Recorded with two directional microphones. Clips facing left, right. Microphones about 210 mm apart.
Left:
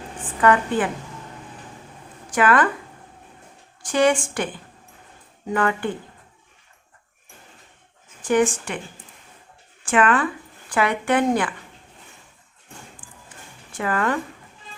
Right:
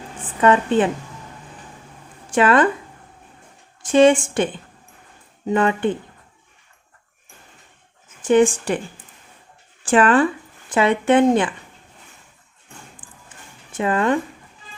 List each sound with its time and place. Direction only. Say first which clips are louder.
0.4 s speech: right 3 dB; 20° right (ahead or behind)
2.3 s speech: right 3 dB; 25° right (ahead or behind)
3.8 s speech: right 6 dB; 25° right (ahead or behind)
8.2 s speech: right 4 dB; 25° right (ahead or behind)
9.8 s speech: right 4 dB; 30° right (ahead or behind)
13.0 s music: even; 10° left (ahead or behind)
13.7 s speech: right 4 dB; 20° right (ahead or behind)